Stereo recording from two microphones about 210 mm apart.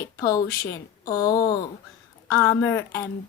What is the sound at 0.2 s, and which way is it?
A woman's voice, 15° left (ahead or behind).